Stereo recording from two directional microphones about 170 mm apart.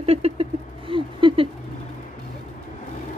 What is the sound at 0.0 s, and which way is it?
Rodents, 35° right (ahead or behind).